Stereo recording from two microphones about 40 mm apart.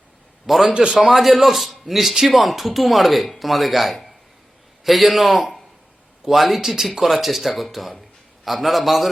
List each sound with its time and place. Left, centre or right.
0.4 s a man's voice: centre
0.7 s a man's voice: right
1.1 s a man's voice: centre